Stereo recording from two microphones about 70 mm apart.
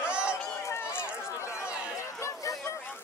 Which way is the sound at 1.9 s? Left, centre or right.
Left.